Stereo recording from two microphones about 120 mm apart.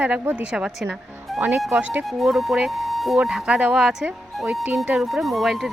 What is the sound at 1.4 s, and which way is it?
Speech, 15° right (ahead or behind).